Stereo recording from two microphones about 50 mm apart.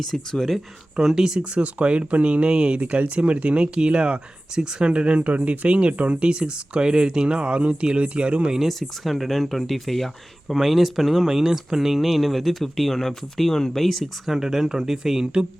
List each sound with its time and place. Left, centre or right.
0.1 s speech: centre
0.9 s speech: centre
1.4 s speech: right
8.5 s speech: centre
14.3 s speech: centre